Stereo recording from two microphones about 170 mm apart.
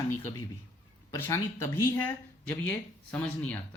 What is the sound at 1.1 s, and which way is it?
Speech, 15° left (ahead or behind).